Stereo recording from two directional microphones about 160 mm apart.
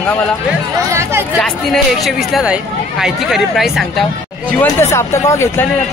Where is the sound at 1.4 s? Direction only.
Centre (ahead or behind).